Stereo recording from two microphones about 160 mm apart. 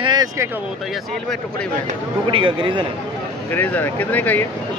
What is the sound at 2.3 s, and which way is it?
Speech, 30° right (ahead or behind).